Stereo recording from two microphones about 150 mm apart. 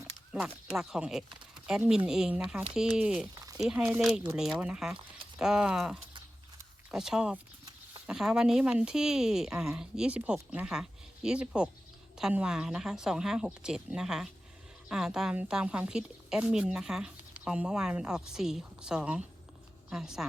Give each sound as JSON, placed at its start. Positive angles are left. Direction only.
{"t": 0.3, "sound": "a woman's voice", "side_deg": -5}
{"t": 3.3, "sound": "a sound", "side_deg": -25}
{"t": 3.6, "sound": "a woman's voice", "side_deg": -5}